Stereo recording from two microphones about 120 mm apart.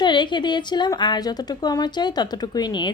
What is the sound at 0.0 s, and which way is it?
A woman's voice, 40° left (ahead or behind).